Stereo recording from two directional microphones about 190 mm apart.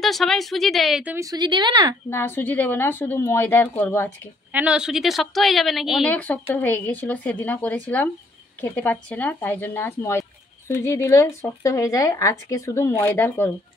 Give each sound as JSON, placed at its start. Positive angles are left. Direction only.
{"t": 0.0, "sound": "a woman's voice", "side_deg": 0}
{"t": 2.0, "sound": "speech", "side_deg": 10}
{"t": 4.5, "sound": "a woman's voice", "side_deg": -5}